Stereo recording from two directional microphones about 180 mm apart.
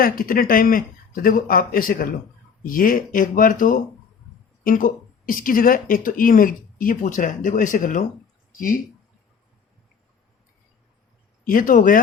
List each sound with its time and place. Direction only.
0.0 s speech: 55° left (ahead or behind)
11.4 s speech: 50° left (ahead or behind)